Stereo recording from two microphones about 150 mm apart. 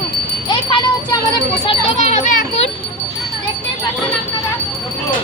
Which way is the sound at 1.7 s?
50° left (ahead or behind).